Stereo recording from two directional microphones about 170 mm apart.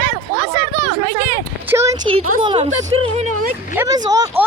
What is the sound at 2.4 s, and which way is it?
Speech, 30° right (ahead or behind).